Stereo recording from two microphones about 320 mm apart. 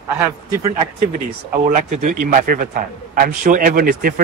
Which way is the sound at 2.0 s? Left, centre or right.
Right.